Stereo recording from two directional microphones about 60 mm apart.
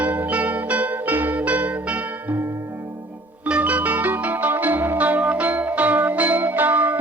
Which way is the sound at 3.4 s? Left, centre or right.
Right.